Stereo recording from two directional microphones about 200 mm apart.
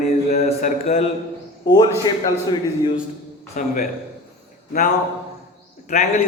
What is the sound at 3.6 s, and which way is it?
Speech, 40° left (ahead or behind).